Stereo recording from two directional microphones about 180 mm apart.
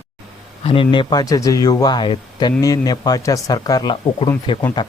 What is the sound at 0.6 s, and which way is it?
Speech, 30° left (ahead or behind).